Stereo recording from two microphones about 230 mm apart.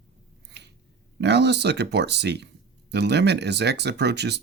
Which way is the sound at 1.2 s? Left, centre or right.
Right.